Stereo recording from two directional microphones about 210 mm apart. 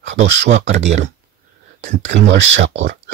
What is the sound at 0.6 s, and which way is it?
Speech, 35° right (ahead or behind).